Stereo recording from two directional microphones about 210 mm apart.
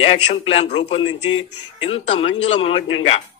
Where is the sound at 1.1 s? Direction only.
75° left (ahead or behind).